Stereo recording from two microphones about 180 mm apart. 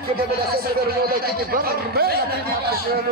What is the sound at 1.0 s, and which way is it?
Speech, 55° right (ahead or behind).